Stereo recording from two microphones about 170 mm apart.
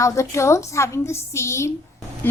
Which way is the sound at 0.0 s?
20° left (ahead or behind).